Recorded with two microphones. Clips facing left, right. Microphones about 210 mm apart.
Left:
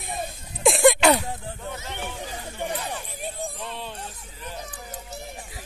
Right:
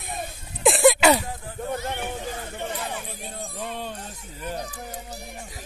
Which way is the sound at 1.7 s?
50° right (ahead or behind).